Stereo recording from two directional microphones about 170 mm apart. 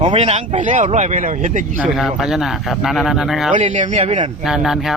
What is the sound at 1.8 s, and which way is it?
Speech, 5° right (ahead or behind).